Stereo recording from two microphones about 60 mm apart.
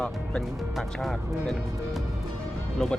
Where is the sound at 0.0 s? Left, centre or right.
Centre.